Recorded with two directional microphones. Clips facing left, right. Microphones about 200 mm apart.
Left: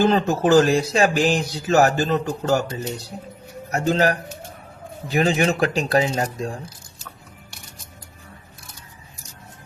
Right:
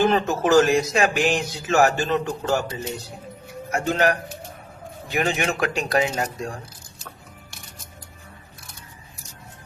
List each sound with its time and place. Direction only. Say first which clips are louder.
0.0 s speech: left 2 dB; 30° left (ahead or behind)
3.7 s speech: left 2 dB; 35° left (ahead or behind)